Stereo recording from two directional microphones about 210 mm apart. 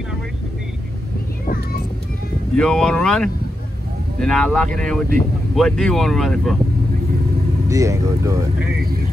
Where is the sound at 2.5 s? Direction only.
5° left (ahead or behind).